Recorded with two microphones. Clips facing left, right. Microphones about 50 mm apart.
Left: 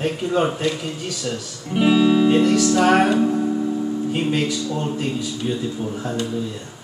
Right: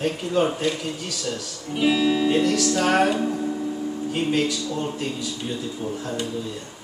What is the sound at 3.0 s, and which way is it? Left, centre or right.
Speech, centre.